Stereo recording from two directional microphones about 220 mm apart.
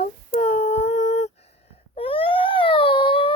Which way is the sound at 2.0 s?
25° left (ahead or behind).